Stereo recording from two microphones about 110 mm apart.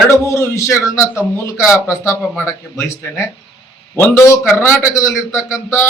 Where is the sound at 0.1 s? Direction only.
25° left (ahead or behind).